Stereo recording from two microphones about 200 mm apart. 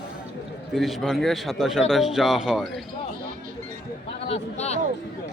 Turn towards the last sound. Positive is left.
turn(degrees=30)  # may be behind; listen again after turning